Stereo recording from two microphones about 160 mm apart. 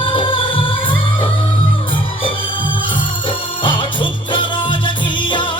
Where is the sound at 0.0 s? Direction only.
35° left (ahead or behind).